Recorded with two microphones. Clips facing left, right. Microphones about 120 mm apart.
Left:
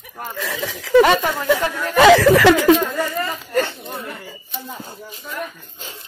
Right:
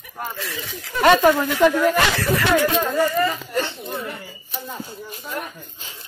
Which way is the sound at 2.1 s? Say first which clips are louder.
Left 9 dB; 90° left.